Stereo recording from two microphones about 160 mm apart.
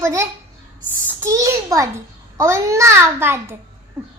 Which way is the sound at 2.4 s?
20° right (ahead or behind).